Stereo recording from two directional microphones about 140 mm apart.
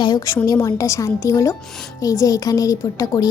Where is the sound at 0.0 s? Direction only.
30° left (ahead or behind).